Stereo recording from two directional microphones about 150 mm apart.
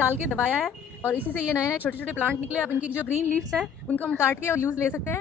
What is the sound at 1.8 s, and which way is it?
Speech, 10° left (ahead or behind).